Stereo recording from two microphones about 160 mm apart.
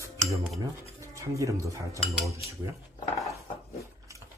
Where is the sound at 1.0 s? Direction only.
20° right (ahead or behind).